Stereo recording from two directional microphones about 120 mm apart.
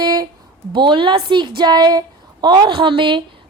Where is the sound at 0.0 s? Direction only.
35° right (ahead or behind).